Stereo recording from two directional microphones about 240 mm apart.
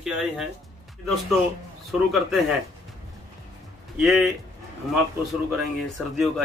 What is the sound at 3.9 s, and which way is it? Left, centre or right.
Speech, centre.